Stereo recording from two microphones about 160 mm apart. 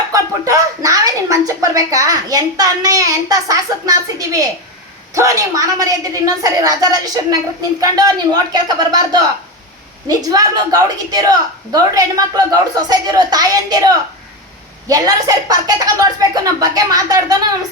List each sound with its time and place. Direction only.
0.1 s a woman's voice: 20° right (ahead or behind)